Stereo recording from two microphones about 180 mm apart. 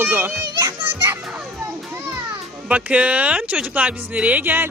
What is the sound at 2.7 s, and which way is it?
Speech, 5° right (ahead or behind).